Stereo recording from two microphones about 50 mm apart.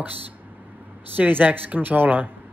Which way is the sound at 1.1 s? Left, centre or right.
Right.